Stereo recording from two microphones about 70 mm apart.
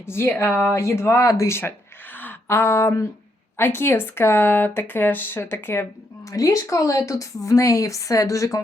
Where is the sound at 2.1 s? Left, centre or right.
Left.